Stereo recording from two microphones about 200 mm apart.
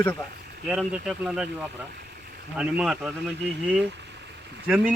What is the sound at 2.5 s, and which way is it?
Speech, 5° right (ahead or behind).